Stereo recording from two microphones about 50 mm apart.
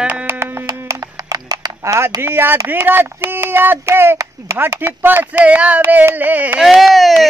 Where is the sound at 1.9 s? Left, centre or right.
Right.